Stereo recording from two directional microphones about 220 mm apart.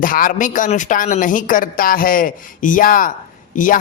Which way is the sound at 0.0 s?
40° left (ahead or behind).